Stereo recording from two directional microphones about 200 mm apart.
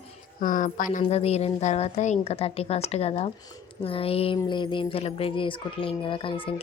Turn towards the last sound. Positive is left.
turn(degrees=25)  # may be behind; listen again after turning